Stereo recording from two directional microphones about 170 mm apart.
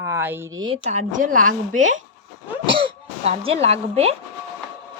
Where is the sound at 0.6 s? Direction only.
40° right (ahead or behind).